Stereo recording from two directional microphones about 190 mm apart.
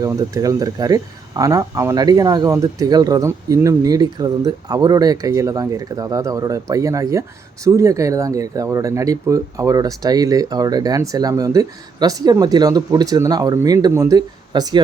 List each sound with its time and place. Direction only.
0.0 s speech: 20° right (ahead or behind)